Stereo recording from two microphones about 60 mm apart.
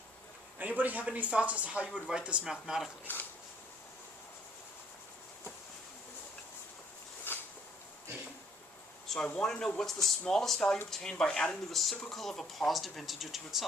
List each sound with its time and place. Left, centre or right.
0.6 s speech: right; by 2.9 s centre
7.3 s a sound: left
9.0 s speech: centre
11.7 s speech: centre